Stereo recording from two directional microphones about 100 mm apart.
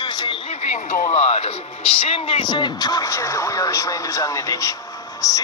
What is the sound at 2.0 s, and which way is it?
Speech, 65° left (ahead or behind).